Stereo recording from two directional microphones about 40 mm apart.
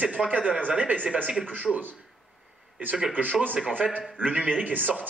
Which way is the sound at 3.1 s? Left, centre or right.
Right.